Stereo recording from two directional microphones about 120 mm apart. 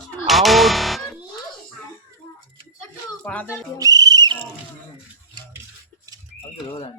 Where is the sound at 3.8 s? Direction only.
30° right (ahead or behind).